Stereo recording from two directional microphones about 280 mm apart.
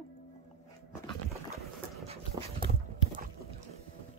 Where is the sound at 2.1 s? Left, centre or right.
Centre.